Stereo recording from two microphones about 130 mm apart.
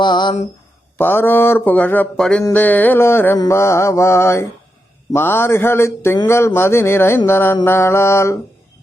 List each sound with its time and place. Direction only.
0.0 s speech: 35° left (ahead or behind)
0.9 s speech: 15° left (ahead or behind)
3.3 s mantra: 25° left (ahead or behind)
5.1 s speech: 15° left (ahead or behind)
6.2 s mantra: 20° left (ahead or behind)